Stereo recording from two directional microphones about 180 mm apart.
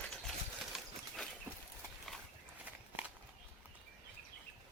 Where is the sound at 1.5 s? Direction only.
15° right (ahead or behind).